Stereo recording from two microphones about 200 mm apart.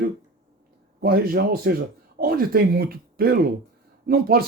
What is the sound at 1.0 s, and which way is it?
Speech, 50° right (ahead or behind).